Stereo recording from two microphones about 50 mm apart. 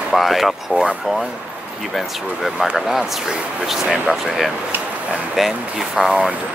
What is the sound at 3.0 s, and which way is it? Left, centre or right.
Speech, centre.